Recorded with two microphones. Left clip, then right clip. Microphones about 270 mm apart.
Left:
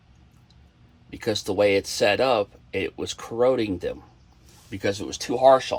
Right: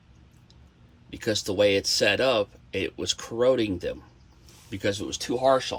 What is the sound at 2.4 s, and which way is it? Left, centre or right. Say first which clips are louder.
Speech: left 2 dB; centre.